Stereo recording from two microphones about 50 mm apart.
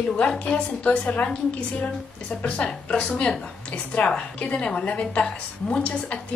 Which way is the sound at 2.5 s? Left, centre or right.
Left.